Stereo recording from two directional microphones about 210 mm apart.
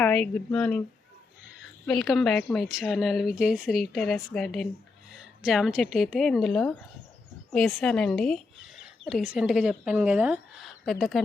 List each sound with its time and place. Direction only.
0.0 s a woman's voice: 5° left (ahead or behind)
1.9 s a woman's voice: centre (ahead or behind)